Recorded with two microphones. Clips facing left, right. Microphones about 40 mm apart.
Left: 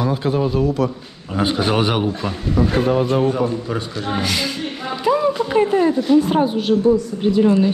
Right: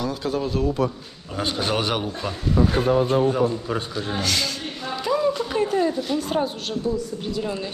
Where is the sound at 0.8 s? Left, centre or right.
Left.